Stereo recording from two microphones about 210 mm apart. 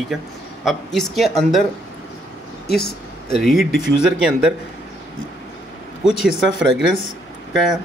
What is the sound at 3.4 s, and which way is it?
Speech, centre (ahead or behind).